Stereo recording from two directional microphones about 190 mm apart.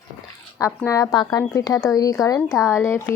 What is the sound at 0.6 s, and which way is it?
Speech, 15° left (ahead or behind).